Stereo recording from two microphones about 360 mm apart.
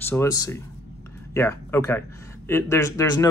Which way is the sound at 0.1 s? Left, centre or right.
Centre.